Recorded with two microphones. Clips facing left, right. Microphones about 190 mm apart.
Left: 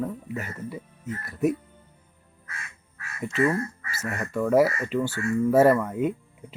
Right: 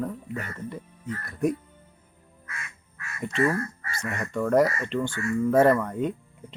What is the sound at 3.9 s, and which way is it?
Speech, 5° left (ahead or behind).